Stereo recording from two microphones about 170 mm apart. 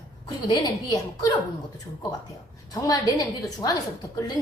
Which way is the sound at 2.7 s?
20° left (ahead or behind).